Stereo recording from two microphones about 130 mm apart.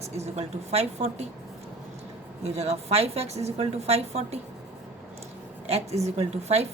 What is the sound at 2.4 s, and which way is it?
A woman's voice, 55° right (ahead or behind).